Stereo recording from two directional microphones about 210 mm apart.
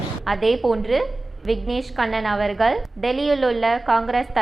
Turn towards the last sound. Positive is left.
turn(degrees=0)  # may be behind; listen again after turning